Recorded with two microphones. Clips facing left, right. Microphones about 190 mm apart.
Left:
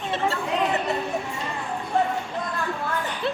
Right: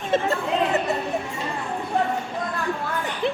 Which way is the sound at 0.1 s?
45° right (ahead or behind).